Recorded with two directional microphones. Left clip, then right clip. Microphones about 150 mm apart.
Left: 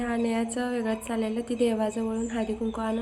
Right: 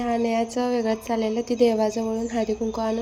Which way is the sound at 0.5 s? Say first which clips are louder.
Right 6 dB; 20° right (ahead or behind).